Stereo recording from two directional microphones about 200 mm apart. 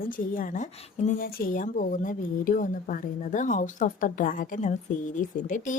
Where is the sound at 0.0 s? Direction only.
45° left (ahead or behind).